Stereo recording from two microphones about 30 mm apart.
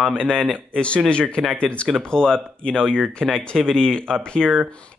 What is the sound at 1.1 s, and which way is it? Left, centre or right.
Speech, left.